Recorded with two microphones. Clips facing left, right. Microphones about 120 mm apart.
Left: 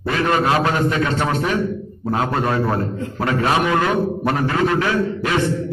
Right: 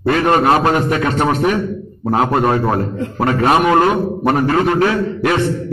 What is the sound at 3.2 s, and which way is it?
Speech, 55° right (ahead or behind).